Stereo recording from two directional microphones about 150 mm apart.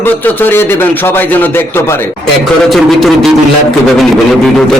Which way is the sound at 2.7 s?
Centre (ahead or behind).